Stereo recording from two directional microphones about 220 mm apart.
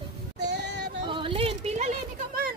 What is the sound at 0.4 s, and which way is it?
Child singing, 50° right (ahead or behind).